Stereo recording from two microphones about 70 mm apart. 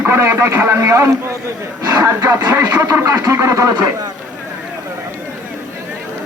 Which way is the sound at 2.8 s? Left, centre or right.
Right.